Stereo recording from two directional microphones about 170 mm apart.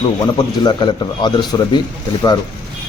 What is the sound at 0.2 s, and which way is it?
A man's voice, 25° left (ahead or behind).